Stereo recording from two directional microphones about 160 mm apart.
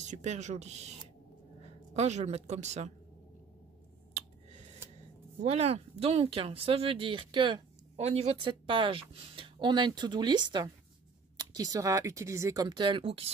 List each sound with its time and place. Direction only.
0.0 s a woman's voice: 45° right (ahead or behind)
5.4 s speech: 40° right (ahead or behind)